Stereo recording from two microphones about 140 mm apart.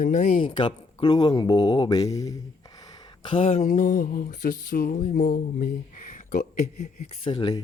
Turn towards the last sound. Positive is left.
turn(degrees=35)  # may be behind; listen again after turning